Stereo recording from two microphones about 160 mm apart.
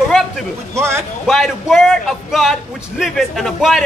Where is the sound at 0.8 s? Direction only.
15° right (ahead or behind).